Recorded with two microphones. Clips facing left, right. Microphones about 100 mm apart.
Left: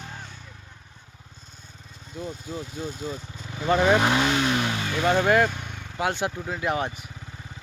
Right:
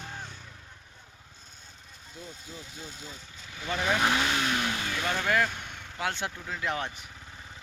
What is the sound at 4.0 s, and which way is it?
Speech, 25° left (ahead or behind).